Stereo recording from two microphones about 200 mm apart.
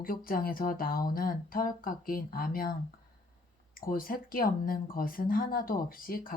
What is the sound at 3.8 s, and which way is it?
Speech, 45° left (ahead or behind).